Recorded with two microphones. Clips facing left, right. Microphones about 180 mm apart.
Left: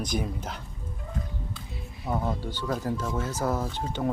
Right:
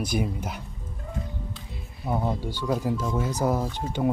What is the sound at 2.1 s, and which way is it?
Speech, 10° right (ahead or behind).